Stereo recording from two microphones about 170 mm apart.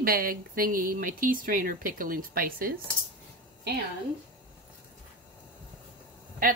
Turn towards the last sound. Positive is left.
turn(degrees=-55)  # may be behind; listen again after turning